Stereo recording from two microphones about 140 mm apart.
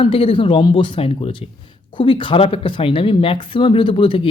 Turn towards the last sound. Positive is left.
turn(degrees=40)  # may be behind; listen again after turning